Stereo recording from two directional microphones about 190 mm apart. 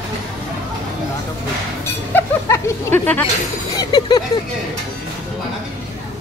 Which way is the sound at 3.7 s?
20° left (ahead or behind).